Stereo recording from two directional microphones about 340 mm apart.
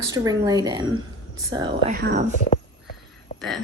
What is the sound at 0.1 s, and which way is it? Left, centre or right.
A woman's voice, centre.